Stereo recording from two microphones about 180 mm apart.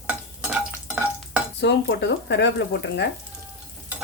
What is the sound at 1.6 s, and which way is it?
Speech, 75° left (ahead or behind).